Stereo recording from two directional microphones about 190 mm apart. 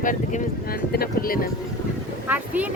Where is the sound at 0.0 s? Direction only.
40° left (ahead or behind).